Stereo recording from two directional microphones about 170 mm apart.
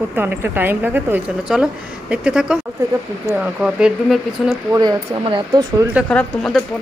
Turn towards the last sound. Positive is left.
turn(degrees=0)  # may be behind; listen again after turning